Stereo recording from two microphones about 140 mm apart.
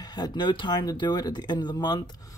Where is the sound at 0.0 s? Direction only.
30° left (ahead or behind).